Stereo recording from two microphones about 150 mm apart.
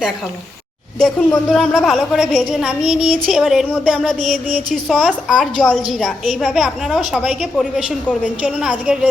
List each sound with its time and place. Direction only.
0.9 s a woman's voice: 5° left (ahead or behind)